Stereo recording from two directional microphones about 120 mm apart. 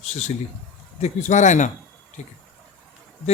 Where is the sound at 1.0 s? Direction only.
90° left.